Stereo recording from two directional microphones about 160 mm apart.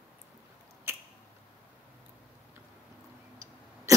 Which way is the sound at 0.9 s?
15° right (ahead or behind).